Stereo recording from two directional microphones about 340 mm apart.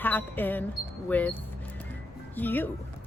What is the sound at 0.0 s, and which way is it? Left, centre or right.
A woman's voice, centre.